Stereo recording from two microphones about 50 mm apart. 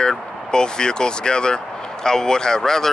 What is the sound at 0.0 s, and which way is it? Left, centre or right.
Speech, centre.